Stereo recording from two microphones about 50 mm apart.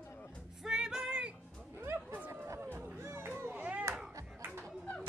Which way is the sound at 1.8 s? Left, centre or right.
Right.